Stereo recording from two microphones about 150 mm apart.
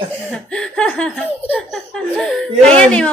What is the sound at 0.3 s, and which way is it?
Speech, 5° left (ahead or behind).